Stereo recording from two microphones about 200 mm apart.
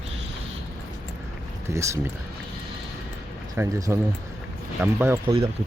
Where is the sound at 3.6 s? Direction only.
15° right (ahead or behind).